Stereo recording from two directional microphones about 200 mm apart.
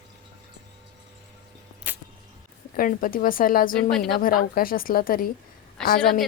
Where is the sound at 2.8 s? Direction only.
45° left (ahead or behind).